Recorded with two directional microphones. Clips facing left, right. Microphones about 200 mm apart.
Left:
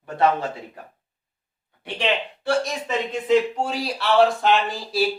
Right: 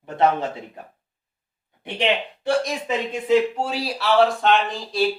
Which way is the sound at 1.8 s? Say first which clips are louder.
Right 2 dB; 15° right (ahead or behind).